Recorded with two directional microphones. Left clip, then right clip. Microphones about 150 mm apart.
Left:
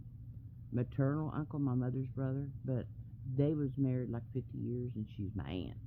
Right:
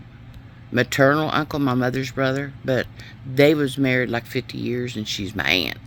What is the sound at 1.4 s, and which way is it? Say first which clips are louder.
Speech: right 17 dB; 50° right (ahead or behind).